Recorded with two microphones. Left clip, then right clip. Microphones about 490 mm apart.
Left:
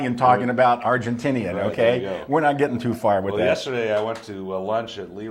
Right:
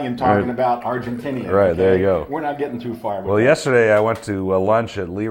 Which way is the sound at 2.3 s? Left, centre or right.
Left.